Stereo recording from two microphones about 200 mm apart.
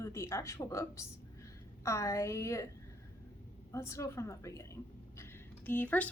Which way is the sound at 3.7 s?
15° left (ahead or behind).